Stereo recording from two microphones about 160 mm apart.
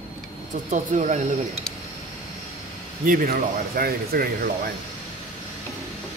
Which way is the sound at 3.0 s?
65° right (ahead or behind).